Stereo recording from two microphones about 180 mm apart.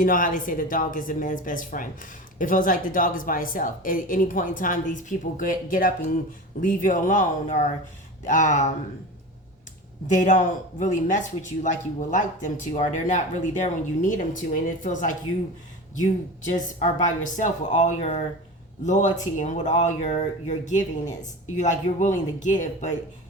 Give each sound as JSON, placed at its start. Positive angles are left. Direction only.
{"t": 0.0, "sound": "speech", "side_deg": 50}
{"t": 10.1, "sound": "speech", "side_deg": 45}
{"t": 16.4, "sound": "speech", "side_deg": 40}